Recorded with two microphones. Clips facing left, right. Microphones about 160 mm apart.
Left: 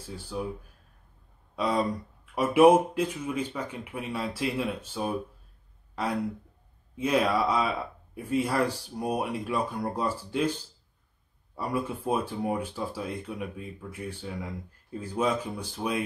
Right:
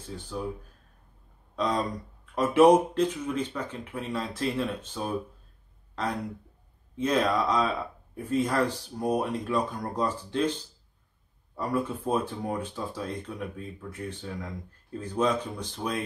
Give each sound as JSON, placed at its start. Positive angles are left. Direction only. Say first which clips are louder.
{"t": 0.0, "sound": "speech", "louder": "left 1 dB", "side_deg": 10}
{"t": 1.5, "sound": "speech", "louder": "left 1 dB", "side_deg": 10}
{"t": 7.0, "sound": "speech", "louder": "even", "side_deg": 10}
{"t": 11.5, "sound": "speech", "louder": "right 2 dB", "side_deg": 10}